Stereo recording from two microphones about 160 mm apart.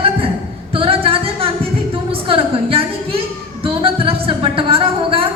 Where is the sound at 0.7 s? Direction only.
35° right (ahead or behind).